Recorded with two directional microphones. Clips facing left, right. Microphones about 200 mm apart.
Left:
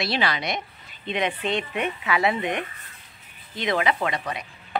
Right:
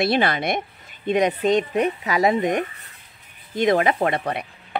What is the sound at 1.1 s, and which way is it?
Speech, 40° right (ahead or behind).